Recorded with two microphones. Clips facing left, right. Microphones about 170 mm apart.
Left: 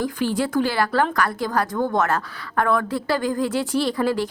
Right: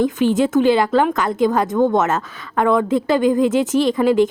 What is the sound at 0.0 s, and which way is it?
A woman's voice, 20° right (ahead or behind).